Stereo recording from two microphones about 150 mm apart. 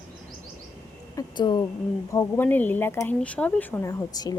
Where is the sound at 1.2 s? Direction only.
25° left (ahead or behind).